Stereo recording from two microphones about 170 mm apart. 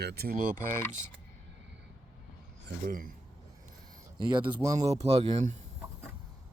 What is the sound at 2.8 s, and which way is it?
Speech, 55° right (ahead or behind).